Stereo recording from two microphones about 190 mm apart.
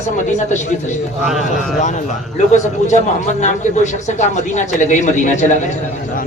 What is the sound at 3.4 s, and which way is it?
Speech, 40° left (ahead or behind).